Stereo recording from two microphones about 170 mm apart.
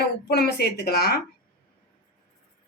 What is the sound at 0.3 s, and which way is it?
Speech, 75° left (ahead or behind).